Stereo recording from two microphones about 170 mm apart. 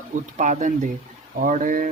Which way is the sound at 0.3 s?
45° right (ahead or behind).